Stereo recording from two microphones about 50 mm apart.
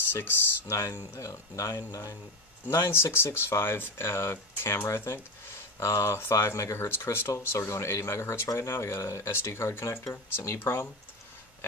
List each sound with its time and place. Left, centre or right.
0.1 s speech: left
0.7 s speech: left
2.7 s speech: left